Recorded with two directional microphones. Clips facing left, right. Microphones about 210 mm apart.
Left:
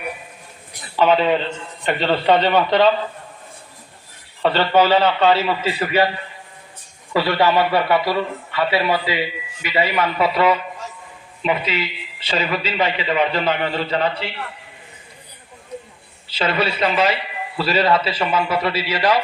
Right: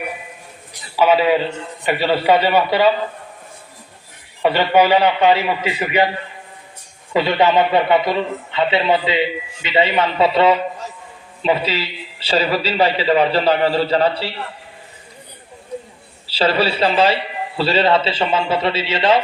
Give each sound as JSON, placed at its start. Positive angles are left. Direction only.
{"t": 0.9, "sound": "a man's voice", "side_deg": -5}
{"t": 4.4, "sound": "a man's voice", "side_deg": -15}
{"t": 7.1, "sound": "a man's voice", "side_deg": -20}
{"t": 16.3, "sound": "a man's voice", "side_deg": -30}